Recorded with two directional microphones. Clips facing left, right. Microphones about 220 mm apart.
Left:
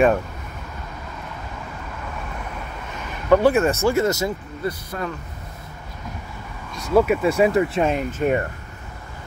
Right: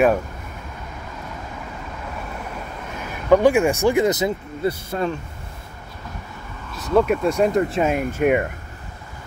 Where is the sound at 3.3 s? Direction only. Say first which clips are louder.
Right 1 dB; 15° right (ahead or behind).